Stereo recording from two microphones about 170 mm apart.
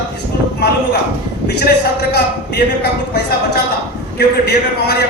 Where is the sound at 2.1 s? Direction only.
70° left (ahead or behind).